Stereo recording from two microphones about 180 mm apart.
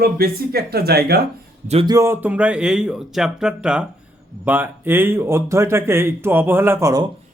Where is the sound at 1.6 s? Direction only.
35° right (ahead or behind).